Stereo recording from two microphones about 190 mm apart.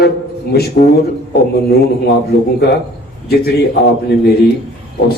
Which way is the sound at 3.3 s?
55° left (ahead or behind).